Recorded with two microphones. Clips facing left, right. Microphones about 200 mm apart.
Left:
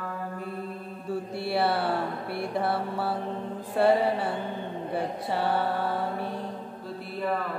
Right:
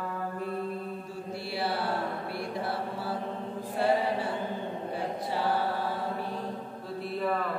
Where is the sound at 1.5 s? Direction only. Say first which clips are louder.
Left 6 dB; 60° left (ahead or behind).